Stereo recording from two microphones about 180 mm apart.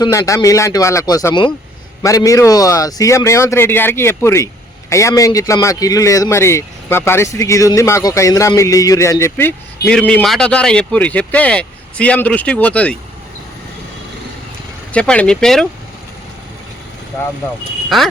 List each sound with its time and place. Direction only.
0.0 s speech: 15° left (ahead or behind)
10.1 s speech: 5° left (ahead or behind)
14.9 s speech: 5° left (ahead or behind)
17.8 s speech: centre (ahead or behind)